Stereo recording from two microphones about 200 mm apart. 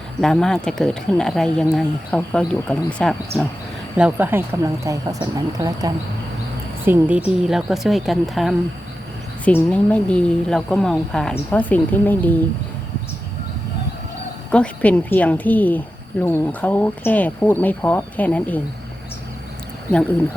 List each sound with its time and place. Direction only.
0.2 s speech: centre (ahead or behind)
3.9 s a woman's voice: 5° right (ahead or behind)
14.5 s a woman's voice: 5° left (ahead or behind)